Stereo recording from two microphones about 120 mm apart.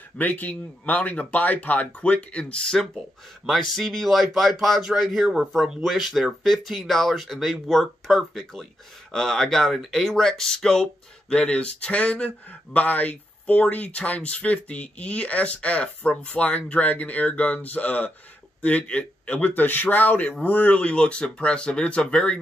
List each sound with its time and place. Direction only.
0.2 s speech: 15° left (ahead or behind)